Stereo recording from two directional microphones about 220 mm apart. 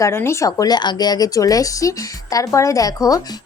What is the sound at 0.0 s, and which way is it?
A woman's voice, 10° left (ahead or behind).